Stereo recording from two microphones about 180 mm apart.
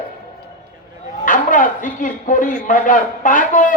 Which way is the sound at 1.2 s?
50° left (ahead or behind).